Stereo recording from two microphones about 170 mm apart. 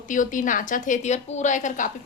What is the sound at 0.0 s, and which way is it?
A woman's voice, 50° left (ahead or behind).